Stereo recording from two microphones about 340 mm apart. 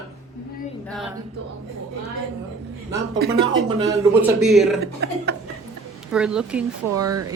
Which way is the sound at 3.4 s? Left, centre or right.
Centre.